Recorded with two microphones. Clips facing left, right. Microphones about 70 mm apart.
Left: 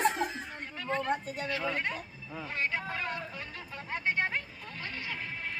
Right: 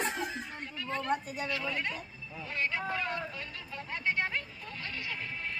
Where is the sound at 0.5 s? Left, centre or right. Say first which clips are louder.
Left 6 dB; left.